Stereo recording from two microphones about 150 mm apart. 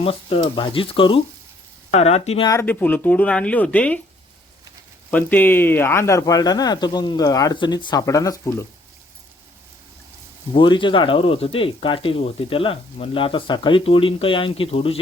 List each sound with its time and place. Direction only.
0.0 s speech: 40° left (ahead or behind)
2.5 s speech: 15° left (ahead or behind)
5.1 s speech: 10° left (ahead or behind)
10.5 s speech: 30° left (ahead or behind)